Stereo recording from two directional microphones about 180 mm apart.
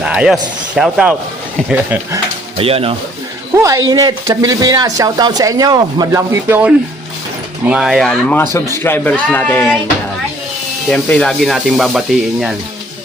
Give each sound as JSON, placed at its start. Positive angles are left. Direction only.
{"t": 0.0, "sound": "speech", "side_deg": -5}
{"t": 2.6, "sound": "speech", "side_deg": -30}
{"t": 3.5, "sound": "speech", "side_deg": -15}
{"t": 10.9, "sound": "speech", "side_deg": 5}